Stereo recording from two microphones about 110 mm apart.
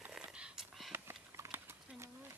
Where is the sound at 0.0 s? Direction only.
10° right (ahead or behind).